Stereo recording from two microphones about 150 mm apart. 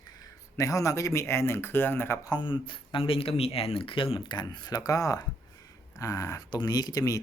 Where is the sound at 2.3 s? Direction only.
30° left (ahead or behind).